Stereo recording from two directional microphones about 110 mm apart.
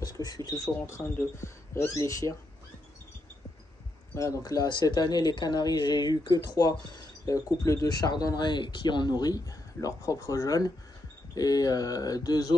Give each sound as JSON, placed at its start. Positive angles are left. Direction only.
{"t": 0.0, "sound": "speech", "side_deg": 35}
{"t": 0.8, "sound": "speech", "side_deg": 25}
{"t": 4.1, "sound": "speech", "side_deg": 30}